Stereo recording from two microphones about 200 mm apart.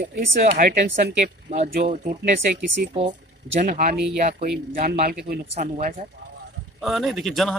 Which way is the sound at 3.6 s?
45° right (ahead or behind).